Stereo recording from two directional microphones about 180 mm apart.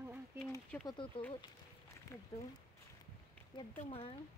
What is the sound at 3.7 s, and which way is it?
Speech, 35° left (ahead or behind).